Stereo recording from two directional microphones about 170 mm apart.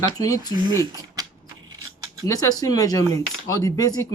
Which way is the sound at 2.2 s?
20° left (ahead or behind).